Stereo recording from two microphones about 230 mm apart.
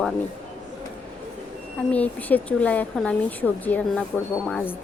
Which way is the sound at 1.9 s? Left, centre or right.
Centre.